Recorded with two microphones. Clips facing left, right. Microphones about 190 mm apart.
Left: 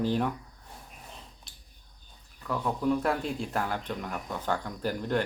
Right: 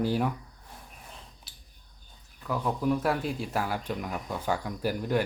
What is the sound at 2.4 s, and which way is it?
Speech, 5° right (ahead or behind).